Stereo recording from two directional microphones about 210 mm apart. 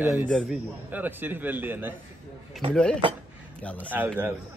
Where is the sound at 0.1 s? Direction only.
Centre (ahead or behind).